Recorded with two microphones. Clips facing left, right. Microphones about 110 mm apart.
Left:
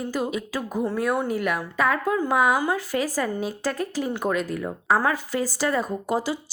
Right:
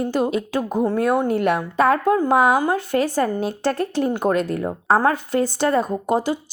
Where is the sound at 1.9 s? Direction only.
45° right (ahead or behind); by 4.6 s 65° right (ahead or behind).